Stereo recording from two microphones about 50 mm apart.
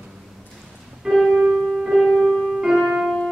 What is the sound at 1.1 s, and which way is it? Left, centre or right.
Music, centre.